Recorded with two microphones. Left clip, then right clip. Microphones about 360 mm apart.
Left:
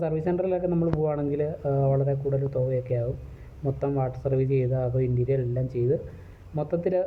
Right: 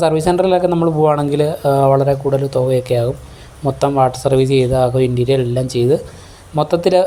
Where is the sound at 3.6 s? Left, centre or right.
Left.